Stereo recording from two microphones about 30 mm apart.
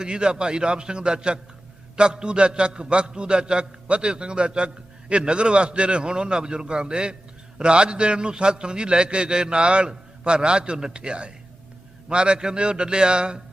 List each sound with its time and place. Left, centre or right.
0.0 s a man's voice: right